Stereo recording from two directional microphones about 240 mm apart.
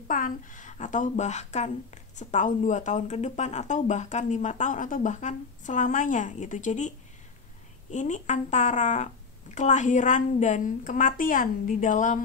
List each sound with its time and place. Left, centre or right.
0.1 s speech: left
7.9 s speech: left